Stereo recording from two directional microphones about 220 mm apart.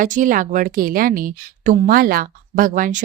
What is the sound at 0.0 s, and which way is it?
A woman's voice, 35° right (ahead or behind).